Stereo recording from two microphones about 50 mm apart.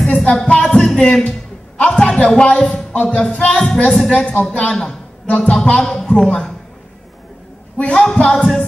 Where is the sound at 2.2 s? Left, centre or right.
Centre.